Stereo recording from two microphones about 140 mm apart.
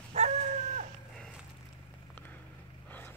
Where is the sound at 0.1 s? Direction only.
55° right (ahead or behind).